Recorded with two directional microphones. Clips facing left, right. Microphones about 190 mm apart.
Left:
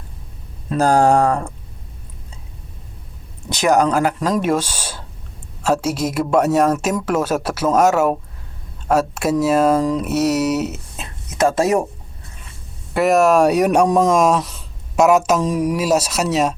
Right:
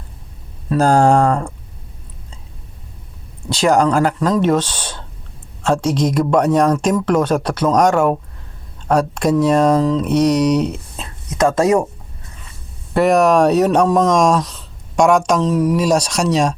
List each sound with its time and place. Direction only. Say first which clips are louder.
0.8 s speech: right 1 dB; 15° left (ahead or behind)
3.5 s speech: right 2 dB; 20° left (ahead or behind)
12.9 s speech: right 1 dB; centre (ahead or behind)